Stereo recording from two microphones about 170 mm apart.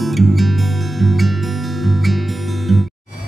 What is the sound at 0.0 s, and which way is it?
Music, centre (ahead or behind).